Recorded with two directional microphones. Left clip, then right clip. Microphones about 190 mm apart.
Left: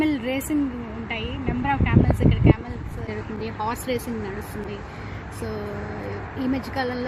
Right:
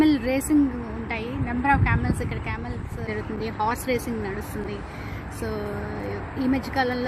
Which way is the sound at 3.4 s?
5° left (ahead or behind).